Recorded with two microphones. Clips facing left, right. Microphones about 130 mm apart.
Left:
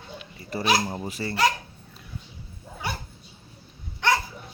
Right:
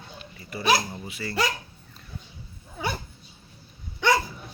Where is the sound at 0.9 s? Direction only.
40° left (ahead or behind).